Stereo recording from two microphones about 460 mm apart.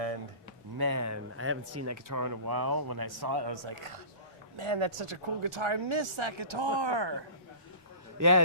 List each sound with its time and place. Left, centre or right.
0.8 s speech: right
8.2 s a man's voice: right